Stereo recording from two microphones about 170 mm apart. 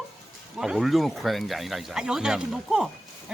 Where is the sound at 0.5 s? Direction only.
5° right (ahead or behind).